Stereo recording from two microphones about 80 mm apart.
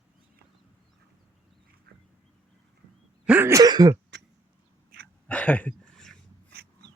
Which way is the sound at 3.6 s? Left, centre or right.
Right.